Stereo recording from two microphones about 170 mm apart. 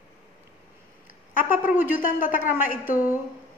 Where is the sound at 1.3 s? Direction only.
55° left (ahead or behind).